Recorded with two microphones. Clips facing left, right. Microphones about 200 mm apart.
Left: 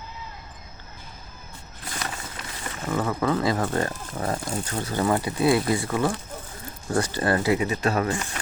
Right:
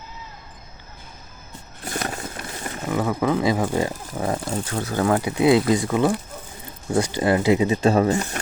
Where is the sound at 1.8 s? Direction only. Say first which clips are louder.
Right 6 dB; 45° right (ahead or behind).